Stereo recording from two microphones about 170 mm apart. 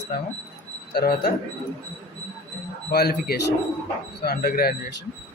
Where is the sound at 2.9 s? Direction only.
65° left (ahead or behind).